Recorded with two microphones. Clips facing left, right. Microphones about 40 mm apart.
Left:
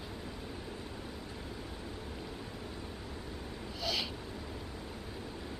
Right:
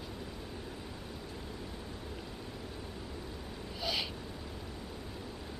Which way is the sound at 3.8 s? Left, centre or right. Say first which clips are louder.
Even; centre.